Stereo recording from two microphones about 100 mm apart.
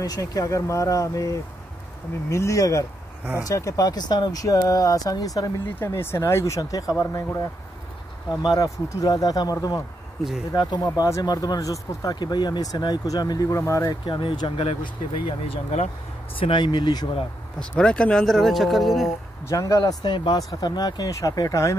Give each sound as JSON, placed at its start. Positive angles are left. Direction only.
{"t": 0.0, "sound": "speech", "side_deg": 40}
{"t": 5.8, "sound": "speech", "side_deg": 25}
{"t": 6.6, "sound": "speech", "side_deg": 40}
{"t": 14.0, "sound": "speech", "side_deg": 50}
{"t": 14.8, "sound": "speech", "side_deg": 65}
{"t": 16.3, "sound": "speech", "side_deg": 60}
{"t": 17.6, "sound": "speech", "side_deg": 10}
{"t": 19.4, "sound": "speech", "side_deg": 35}
{"t": 19.8, "sound": "speech", "side_deg": 45}